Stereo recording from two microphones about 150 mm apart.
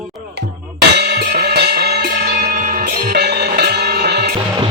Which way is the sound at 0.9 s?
90° right.